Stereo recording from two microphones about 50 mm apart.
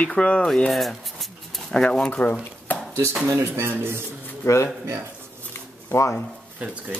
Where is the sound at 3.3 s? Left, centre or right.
Right.